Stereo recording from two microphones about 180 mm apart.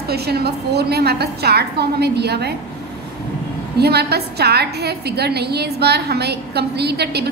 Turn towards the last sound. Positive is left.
turn(degrees=-65)  # may be behind; listen again after turning